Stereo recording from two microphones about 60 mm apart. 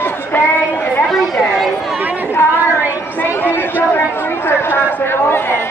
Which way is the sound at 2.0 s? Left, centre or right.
Right.